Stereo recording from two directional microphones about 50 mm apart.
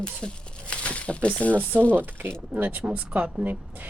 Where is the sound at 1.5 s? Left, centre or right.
Right.